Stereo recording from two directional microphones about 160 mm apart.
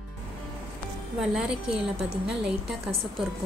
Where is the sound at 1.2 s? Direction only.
5° right (ahead or behind).